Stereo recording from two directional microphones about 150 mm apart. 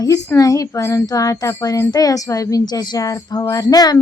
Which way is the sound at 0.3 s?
25° left (ahead or behind).